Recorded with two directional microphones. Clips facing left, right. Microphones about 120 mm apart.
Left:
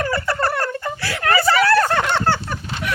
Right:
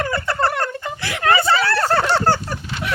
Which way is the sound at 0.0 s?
20° right (ahead or behind).